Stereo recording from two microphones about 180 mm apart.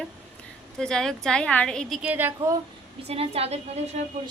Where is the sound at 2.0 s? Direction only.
10° right (ahead or behind).